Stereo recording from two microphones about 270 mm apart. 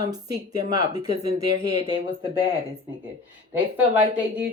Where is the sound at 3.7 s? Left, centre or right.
Centre.